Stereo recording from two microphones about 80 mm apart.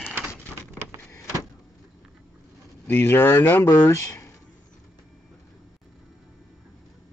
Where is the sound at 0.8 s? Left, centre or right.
Right.